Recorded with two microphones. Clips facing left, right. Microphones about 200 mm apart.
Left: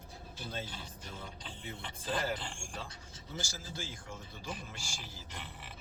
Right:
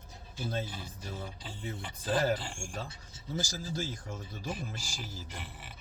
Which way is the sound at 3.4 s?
40° right (ahead or behind).